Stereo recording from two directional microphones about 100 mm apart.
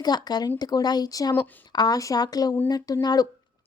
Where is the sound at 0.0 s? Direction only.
45° left (ahead or behind).